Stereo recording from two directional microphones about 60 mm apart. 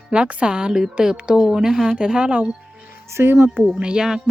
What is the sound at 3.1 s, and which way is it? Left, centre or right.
Speech, right.